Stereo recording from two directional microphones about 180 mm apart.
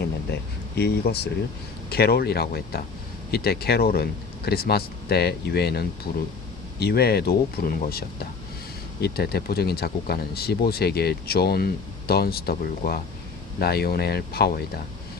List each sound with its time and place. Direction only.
0.8 s speech: 65° left (ahead or behind)